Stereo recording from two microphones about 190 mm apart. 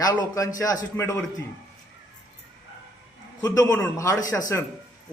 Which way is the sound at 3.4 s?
20° left (ahead or behind).